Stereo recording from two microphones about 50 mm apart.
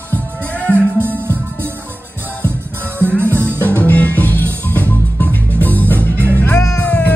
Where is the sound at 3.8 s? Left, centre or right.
Left.